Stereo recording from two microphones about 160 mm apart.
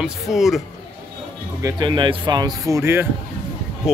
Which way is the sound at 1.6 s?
25° right (ahead or behind).